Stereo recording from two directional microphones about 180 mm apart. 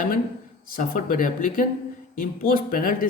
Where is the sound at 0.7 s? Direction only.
50° left (ahead or behind).